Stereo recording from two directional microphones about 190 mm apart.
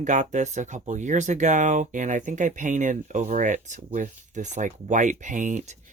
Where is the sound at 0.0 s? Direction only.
40° right (ahead or behind).